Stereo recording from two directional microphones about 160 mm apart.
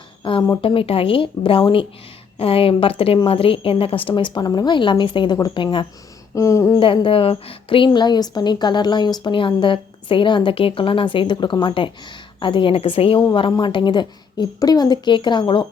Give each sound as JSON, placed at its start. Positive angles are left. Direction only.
{"t": 0.2, "sound": "a woman's voice", "side_deg": 35}
{"t": 6.7, "sound": "a woman's voice", "side_deg": 30}